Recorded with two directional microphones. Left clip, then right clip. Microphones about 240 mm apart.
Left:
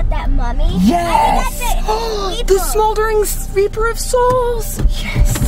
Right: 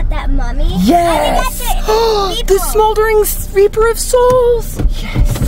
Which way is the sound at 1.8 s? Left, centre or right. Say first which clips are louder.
Right 8 dB; right.